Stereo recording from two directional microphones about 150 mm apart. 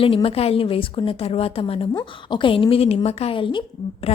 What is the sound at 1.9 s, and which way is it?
A woman's voice, 30° left (ahead or behind).